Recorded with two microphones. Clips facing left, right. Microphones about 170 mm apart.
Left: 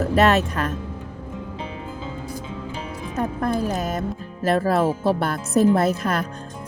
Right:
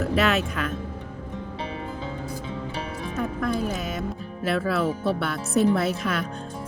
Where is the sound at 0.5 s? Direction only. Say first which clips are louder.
Left 3 dB; 40° left (ahead or behind).